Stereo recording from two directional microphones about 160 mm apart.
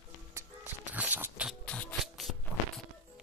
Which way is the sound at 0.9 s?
10° right (ahead or behind).